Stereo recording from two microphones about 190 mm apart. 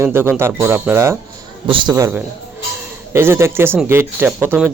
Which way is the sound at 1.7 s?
25° right (ahead or behind).